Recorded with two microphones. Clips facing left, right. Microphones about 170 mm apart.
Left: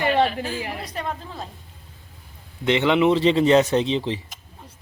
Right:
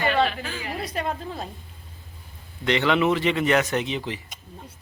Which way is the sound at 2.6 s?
20° left (ahead or behind).